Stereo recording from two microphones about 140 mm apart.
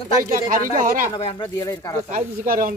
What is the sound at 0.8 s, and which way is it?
Speech, 75° right (ahead or behind).